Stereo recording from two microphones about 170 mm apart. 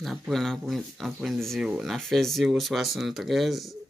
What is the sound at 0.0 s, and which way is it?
Speech, centre (ahead or behind).